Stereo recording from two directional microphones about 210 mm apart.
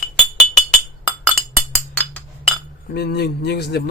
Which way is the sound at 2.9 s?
50° left (ahead or behind).